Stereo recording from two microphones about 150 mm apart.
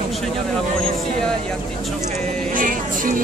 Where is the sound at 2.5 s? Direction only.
65° right (ahead or behind).